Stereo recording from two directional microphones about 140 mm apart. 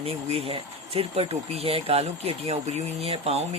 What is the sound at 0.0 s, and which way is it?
Speech, 45° right (ahead or behind).